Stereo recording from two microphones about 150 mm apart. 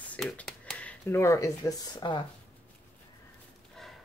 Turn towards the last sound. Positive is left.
turn(degrees=0)  # may be behind; listen again after turning